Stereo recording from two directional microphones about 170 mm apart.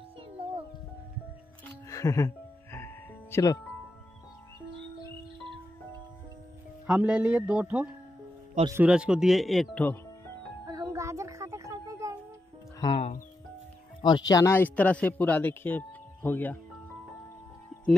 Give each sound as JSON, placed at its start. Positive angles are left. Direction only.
{"t": 1.9, "sound": "music", "side_deg": 20}
{"t": 6.9, "sound": "speech", "side_deg": -5}
{"t": 10.7, "sound": "a sound", "side_deg": -20}
{"t": 12.8, "sound": "music", "side_deg": 35}
{"t": 14.0, "sound": "speech", "side_deg": 25}